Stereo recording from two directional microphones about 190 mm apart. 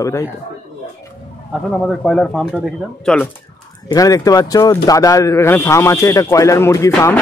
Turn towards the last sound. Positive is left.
turn(degrees=15)  # may be behind; listen again after turning